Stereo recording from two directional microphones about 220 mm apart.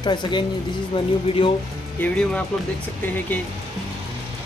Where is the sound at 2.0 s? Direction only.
5° left (ahead or behind).